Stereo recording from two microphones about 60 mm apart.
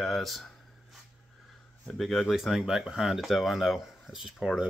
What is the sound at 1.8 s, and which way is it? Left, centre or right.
Speech, centre.